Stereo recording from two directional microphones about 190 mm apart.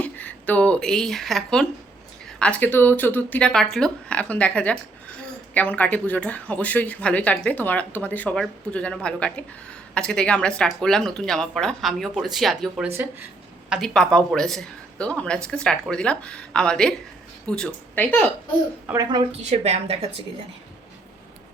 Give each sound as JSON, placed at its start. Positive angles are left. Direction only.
{"t": 0.0, "sound": "speech", "side_deg": 10}
{"t": 13.7, "sound": "speech", "side_deg": 0}
{"t": 18.9, "sound": "a woman's voice", "side_deg": -20}
{"t": 19.4, "sound": "a woman's voice", "side_deg": -35}